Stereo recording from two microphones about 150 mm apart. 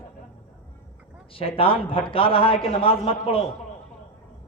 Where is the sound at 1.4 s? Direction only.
35° left (ahead or behind).